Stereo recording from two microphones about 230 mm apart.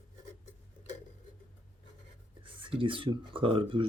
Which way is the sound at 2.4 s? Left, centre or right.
Right.